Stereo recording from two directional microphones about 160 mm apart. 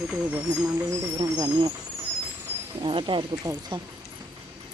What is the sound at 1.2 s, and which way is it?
Speech, 25° right (ahead or behind).